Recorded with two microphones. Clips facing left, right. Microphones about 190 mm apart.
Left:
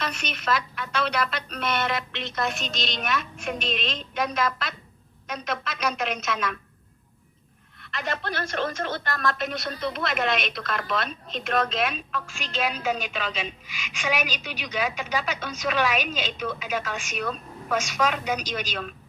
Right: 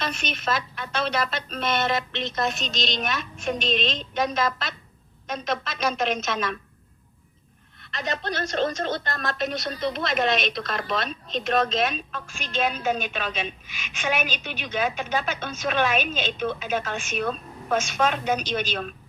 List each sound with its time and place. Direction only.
0.0 s a woman's voice: 25° right (ahead or behind)
3.5 s speech: 5° left (ahead or behind)
3.8 s a woman's voice: 25° right (ahead or behind)
7.9 s a woman's voice: 20° right (ahead or behind)
13.7 s a woman's voice: 90° left
14.0 s a woman's voice: 25° right (ahead or behind)